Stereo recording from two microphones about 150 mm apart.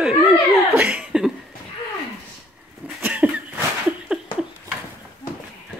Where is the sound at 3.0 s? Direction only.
10° right (ahead or behind).